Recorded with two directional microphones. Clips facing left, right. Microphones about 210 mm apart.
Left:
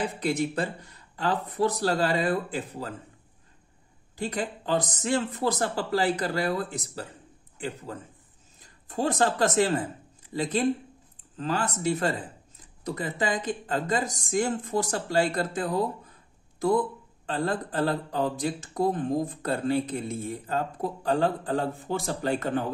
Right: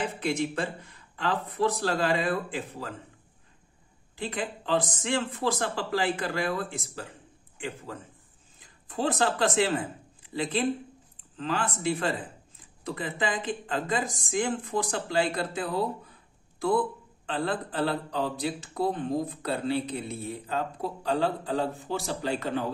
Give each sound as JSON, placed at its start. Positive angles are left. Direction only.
{"t": 0.2, "sound": "speech", "side_deg": 40}
{"t": 4.2, "sound": "speech", "side_deg": 40}
{"t": 8.5, "sound": "speech", "side_deg": 40}